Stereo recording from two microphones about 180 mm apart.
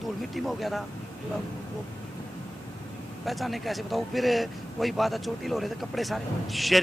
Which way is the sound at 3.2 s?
Centre (ahead or behind).